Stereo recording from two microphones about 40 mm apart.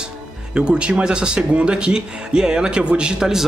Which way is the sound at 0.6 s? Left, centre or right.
Right.